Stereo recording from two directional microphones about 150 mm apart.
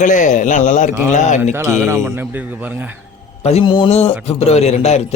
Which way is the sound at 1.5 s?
15° right (ahead or behind).